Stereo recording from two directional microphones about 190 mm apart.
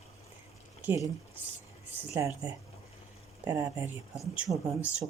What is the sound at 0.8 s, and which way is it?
Speech, 10° right (ahead or behind).